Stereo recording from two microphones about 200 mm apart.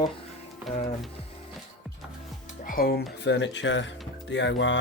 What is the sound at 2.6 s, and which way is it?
Speech, 45° left (ahead or behind).